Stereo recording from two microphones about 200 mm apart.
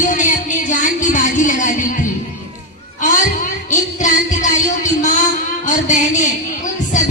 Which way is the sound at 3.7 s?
40° left (ahead or behind).